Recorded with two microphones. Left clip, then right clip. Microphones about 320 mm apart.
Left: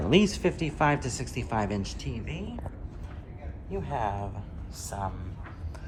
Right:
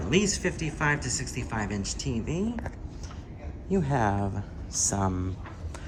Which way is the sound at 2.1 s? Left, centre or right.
Centre.